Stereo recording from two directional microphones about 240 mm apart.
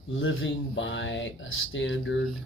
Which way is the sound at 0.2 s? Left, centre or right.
Left.